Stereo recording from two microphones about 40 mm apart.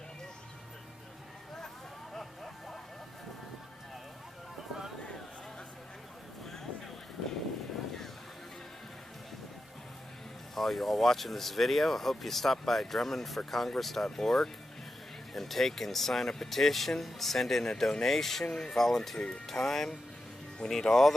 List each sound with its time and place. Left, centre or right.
2.1 s a sound: centre
10.5 s speech: centre
19.1 s speech: left
19.4 s speech: centre